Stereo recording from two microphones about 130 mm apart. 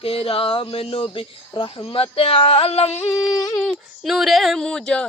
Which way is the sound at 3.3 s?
30° left (ahead or behind).